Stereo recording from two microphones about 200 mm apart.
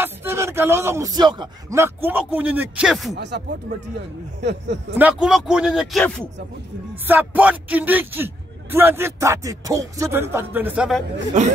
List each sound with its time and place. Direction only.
0.0 s speech: 10° right (ahead or behind)
3.2 s speech: 60° right (ahead or behind)
4.9 s speech: 5° right (ahead or behind)
7.1 s speech: 10° right (ahead or behind)